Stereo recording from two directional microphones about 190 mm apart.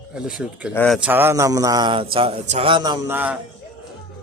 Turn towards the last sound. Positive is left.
turn(degrees=-10)  # may be behind; listen again after turning